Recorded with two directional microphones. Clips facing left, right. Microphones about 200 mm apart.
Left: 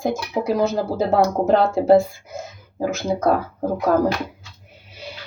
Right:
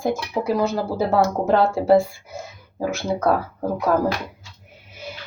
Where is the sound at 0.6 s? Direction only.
20° left (ahead or behind).